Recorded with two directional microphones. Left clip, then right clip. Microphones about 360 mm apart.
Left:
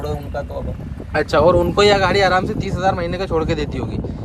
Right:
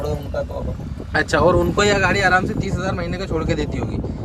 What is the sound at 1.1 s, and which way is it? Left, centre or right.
Speech, centre.